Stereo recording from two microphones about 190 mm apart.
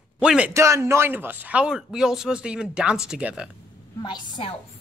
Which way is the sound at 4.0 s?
20° left (ahead or behind).